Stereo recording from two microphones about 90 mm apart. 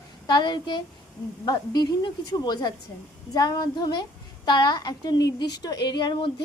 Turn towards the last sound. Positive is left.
turn(degrees=65)  # may be behind; listen again after turning